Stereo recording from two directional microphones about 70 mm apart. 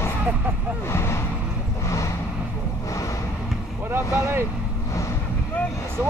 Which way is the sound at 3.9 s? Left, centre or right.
Right.